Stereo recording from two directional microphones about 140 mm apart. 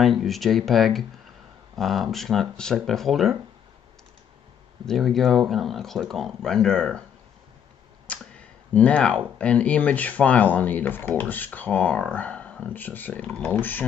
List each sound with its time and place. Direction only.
0.0 s speech: centre (ahead or behind)
4.8 s speech: centre (ahead or behind)
8.1 s speech: 10° left (ahead or behind)